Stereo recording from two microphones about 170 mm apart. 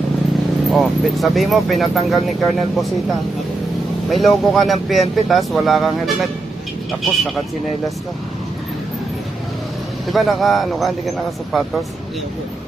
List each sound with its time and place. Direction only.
0.7 s speech: centre (ahead or behind)
10.1 s speech: centre (ahead or behind)